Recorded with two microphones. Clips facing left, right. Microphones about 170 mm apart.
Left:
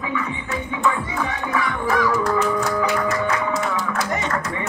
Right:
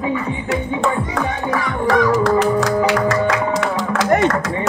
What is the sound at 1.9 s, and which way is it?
Music, 85° right.